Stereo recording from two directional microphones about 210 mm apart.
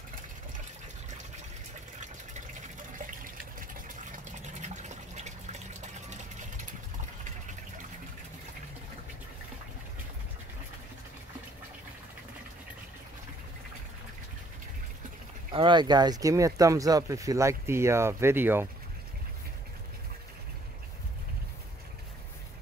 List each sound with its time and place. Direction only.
3.0 s water: 40° right (ahead or behind)
4.4 s fill: 35° right (ahead or behind)
15.5 s speech: 25° right (ahead or behind)